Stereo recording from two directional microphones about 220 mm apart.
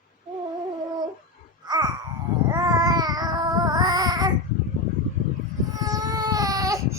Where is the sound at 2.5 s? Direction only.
15° right (ahead or behind).